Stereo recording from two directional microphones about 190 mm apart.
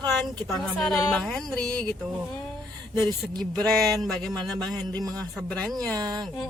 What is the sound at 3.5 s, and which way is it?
Speech, 5° left (ahead or behind).